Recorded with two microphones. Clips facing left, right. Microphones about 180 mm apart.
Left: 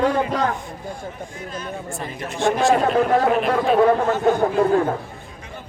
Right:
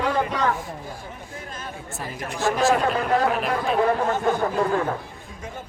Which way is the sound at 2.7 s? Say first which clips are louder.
Left 4 dB; 45° left (ahead or behind).